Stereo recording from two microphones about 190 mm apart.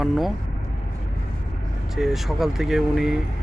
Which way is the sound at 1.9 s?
Centre (ahead or behind).